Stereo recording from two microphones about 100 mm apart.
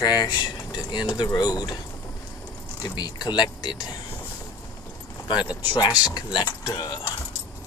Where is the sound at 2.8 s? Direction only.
45° left (ahead or behind).